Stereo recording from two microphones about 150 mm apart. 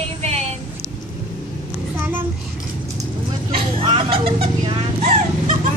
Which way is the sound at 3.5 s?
40° right (ahead or behind).